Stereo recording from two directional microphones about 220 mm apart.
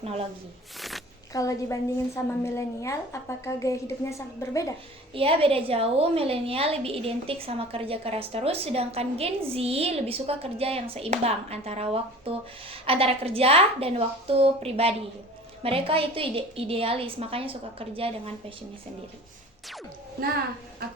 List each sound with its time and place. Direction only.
0.0 s a woman's voice: 25° right (ahead or behind)
0.8 s a sound: centre (ahead or behind)
1.3 s a woman's voice: 15° left (ahead or behind)
5.1 s a woman's voice: 25° right (ahead or behind)